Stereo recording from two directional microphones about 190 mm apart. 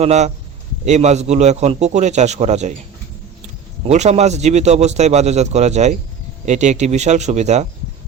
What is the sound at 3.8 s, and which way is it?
A man's voice, 35° right (ahead or behind).